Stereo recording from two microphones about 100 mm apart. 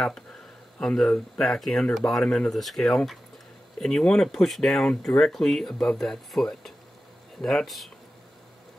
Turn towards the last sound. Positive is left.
turn(degrees=0)  # may be behind; listen again after turning